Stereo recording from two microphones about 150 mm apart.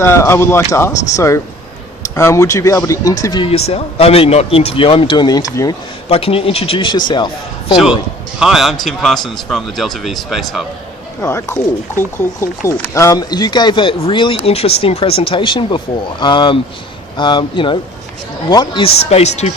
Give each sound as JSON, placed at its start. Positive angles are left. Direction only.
{"t": 0.0, "sound": "speech", "side_deg": 15}
{"t": 3.4, "sound": "speech", "side_deg": 40}
{"t": 6.1, "sound": "speech", "side_deg": 40}
{"t": 8.4, "sound": "a man's voice", "side_deg": 0}
{"t": 11.2, "sound": "speech", "side_deg": 20}